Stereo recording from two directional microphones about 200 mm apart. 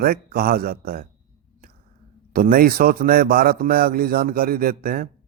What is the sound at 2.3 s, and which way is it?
A man's voice, 45° right (ahead or behind).